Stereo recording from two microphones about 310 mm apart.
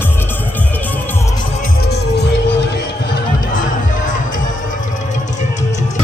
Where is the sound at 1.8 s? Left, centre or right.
Left.